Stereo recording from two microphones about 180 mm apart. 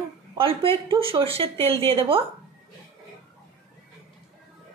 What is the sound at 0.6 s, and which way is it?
A woman's voice, 30° right (ahead or behind).